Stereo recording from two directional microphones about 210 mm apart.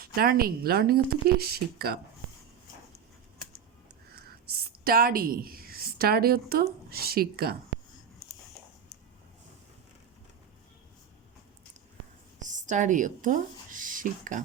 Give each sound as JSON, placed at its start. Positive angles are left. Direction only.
{"t": 0.0, "sound": "speech", "side_deg": -45}
{"t": 4.1, "sound": "a sound", "side_deg": -45}
{"t": 6.9, "sound": "speech", "side_deg": -45}
{"t": 12.4, "sound": "a woman's voice", "side_deg": -35}